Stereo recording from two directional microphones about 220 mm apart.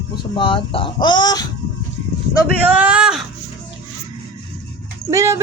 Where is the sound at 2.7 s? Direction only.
5° right (ahead or behind).